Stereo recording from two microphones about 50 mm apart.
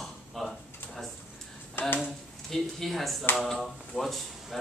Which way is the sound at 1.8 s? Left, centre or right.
Left.